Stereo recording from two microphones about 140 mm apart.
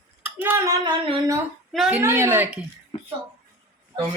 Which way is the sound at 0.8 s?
35° right (ahead or behind).